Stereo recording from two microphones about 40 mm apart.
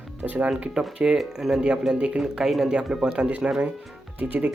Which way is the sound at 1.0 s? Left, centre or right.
Right.